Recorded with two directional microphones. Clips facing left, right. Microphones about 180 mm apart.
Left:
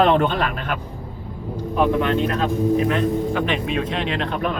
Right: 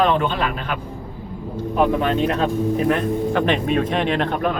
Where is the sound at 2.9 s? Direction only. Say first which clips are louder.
Right 1 dB; 50° right (ahead or behind).